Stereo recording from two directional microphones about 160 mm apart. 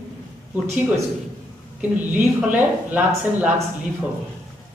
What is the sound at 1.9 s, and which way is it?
A man's voice, 10° right (ahead or behind).